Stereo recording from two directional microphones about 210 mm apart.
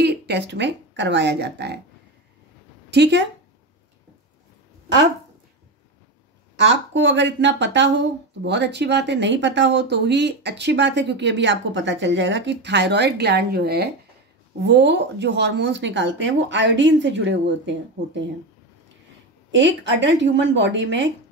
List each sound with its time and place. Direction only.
0.0 s speech: 50° right (ahead or behind)
2.9 s speech: 55° right (ahead or behind)
6.6 s speech: 60° right (ahead or behind)
19.5 s speech: 60° right (ahead or behind)